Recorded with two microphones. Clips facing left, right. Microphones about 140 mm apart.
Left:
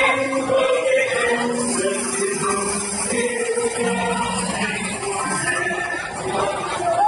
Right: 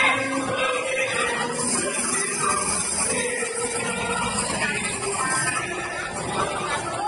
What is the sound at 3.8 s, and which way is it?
Music, 70° left (ahead or behind).